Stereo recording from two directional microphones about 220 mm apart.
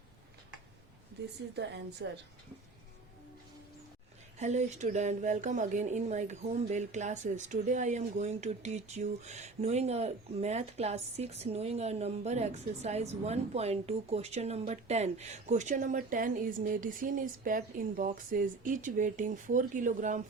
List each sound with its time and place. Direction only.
1.5 s a woman's voice: 50° right (ahead or behind)
4.4 s speech: 30° right (ahead or behind)